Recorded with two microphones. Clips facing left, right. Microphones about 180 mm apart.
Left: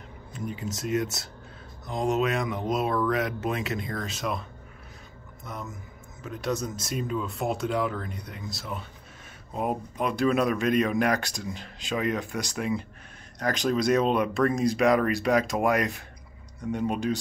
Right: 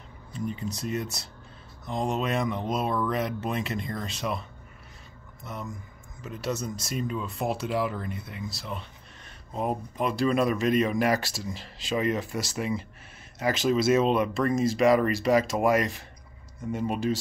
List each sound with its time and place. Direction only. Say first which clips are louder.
0.5 s speech: left 3 dB; centre (ahead or behind)
5.4 s speech: right 1 dB; centre (ahead or behind)